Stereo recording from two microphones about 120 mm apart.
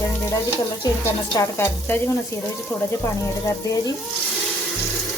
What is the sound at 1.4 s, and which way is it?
Stir, 20° left (ahead or behind).